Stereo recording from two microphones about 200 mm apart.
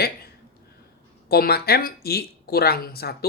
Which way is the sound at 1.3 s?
50° left (ahead or behind).